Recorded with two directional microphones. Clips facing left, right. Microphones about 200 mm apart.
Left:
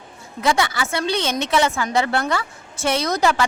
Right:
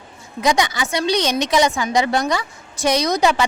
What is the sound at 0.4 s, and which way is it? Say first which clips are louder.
Speech: right 2 dB; 15° right (ahead or behind).